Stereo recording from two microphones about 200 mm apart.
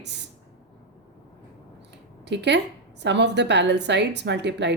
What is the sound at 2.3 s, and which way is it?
A woman's voice, 60° right (ahead or behind).